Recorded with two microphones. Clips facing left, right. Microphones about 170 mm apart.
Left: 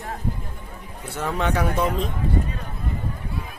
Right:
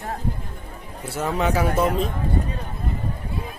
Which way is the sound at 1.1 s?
5° right (ahead or behind).